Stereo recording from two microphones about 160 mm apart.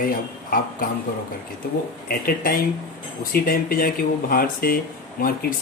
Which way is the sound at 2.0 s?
65° left (ahead or behind).